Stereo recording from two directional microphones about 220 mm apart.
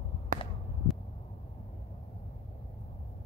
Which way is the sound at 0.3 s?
40° right (ahead or behind).